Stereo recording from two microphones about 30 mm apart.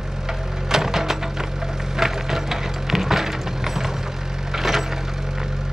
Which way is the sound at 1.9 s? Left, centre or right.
Centre.